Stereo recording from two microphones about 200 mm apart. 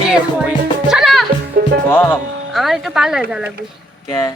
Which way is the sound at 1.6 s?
50° right (ahead or behind).